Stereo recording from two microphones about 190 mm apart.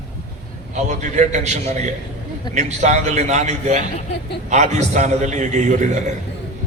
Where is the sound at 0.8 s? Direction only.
40° right (ahead or behind).